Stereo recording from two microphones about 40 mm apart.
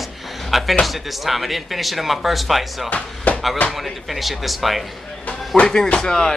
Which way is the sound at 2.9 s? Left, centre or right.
Left.